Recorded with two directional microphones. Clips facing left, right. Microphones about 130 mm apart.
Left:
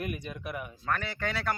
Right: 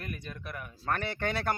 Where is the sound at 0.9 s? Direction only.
35° right (ahead or behind).